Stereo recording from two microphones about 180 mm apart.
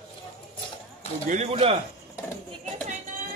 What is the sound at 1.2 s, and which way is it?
Speech, 40° right (ahead or behind).